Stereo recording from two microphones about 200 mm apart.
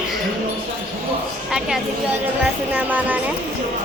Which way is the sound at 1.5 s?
5° right (ahead or behind).